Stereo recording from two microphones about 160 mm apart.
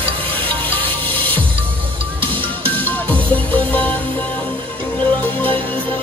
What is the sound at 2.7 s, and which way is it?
Music, 10° left (ahead or behind).